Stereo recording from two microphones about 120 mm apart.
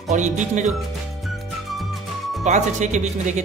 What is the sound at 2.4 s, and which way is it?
Speech, 85° right.